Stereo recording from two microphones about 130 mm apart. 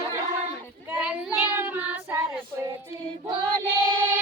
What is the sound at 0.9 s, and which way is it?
Child singing, 10° right (ahead or behind).